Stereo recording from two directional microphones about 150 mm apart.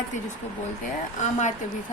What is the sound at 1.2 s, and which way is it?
Speech, 55° left (ahead or behind).